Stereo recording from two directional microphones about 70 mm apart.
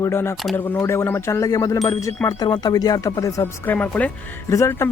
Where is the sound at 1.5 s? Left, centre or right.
Left.